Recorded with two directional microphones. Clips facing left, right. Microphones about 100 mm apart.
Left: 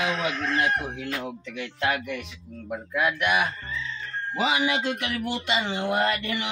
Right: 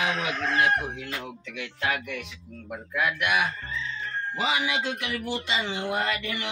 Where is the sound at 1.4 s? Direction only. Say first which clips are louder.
Left 3 dB; 5° right (ahead or behind).